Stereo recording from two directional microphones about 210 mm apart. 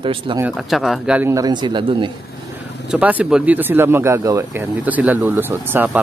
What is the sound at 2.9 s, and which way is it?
Speech, 5° right (ahead or behind).